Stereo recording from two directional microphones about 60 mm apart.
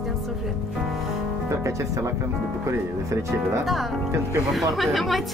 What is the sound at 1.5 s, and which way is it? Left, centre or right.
Speech, right.